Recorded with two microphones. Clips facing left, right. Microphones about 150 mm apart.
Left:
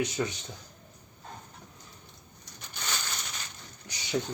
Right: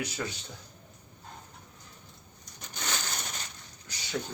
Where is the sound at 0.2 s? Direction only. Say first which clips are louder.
Left 3 dB; 20° left (ahead or behind).